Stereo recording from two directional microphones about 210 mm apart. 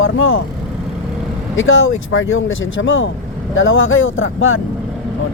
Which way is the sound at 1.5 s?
70° left (ahead or behind).